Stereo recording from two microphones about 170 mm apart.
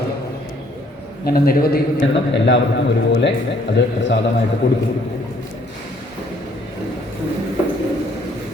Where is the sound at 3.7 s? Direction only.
90° left.